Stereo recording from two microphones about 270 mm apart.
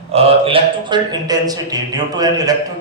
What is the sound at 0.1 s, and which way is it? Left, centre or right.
A man's voice, right.